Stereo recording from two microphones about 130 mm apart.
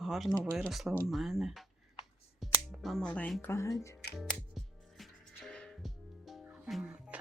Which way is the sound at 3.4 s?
20° left (ahead or behind).